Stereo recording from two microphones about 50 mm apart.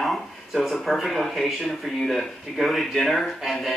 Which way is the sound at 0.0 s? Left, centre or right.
Centre.